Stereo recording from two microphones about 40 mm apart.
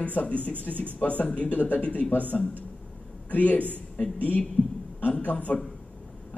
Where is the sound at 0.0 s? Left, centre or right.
Left.